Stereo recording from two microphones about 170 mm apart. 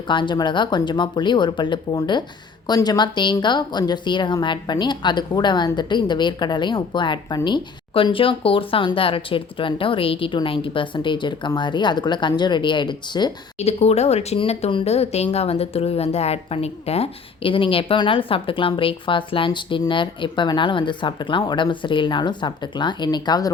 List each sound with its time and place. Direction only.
0.1 s speech: 25° left (ahead or behind)
13.6 s speech: 40° left (ahead or behind)